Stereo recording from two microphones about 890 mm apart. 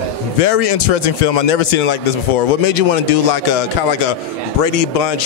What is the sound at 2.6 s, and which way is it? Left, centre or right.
Speech, left.